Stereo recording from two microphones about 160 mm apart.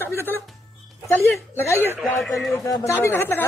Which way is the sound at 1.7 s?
10° right (ahead or behind).